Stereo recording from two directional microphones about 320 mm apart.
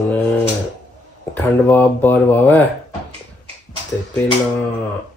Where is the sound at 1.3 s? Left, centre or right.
Centre.